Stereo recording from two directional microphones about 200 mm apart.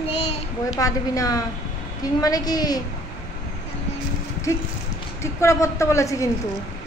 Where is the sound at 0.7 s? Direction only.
15° left (ahead or behind).